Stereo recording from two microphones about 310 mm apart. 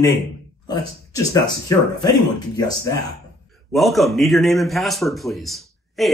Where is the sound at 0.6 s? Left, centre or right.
Centre.